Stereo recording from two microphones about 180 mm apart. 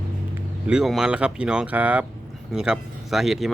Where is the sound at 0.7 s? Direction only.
5° right (ahead or behind).